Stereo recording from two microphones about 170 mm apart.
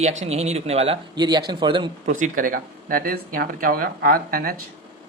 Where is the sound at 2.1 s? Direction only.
50° right (ahead or behind).